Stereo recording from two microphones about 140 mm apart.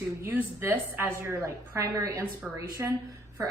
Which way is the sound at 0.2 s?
15° right (ahead or behind).